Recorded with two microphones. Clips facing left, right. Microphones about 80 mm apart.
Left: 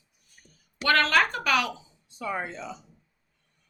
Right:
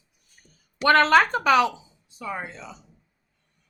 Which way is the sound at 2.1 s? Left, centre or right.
Centre.